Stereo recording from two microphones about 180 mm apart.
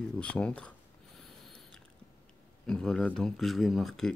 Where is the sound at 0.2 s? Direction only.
5° left (ahead or behind).